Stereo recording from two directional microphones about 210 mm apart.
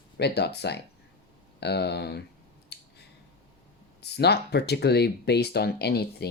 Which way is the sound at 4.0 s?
50° left (ahead or behind).